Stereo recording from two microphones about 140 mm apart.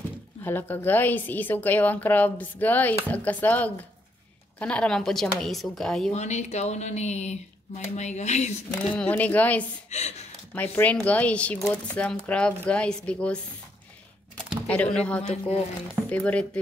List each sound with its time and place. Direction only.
0.4 s a woman's voice: 15° left (ahead or behind)
6.1 s speech: 55° left (ahead or behind)
8.9 s a woman's voice: 10° left (ahead or behind)
9.8 s speech: 50° left (ahead or behind)
10.5 s a woman's voice: 10° left (ahead or behind)
14.7 s a woman's voice: 5° left (ahead or behind)